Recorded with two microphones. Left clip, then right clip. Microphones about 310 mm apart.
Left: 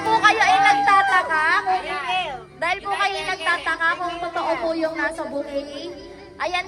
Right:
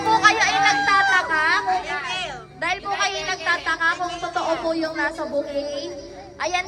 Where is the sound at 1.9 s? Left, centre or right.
Centre.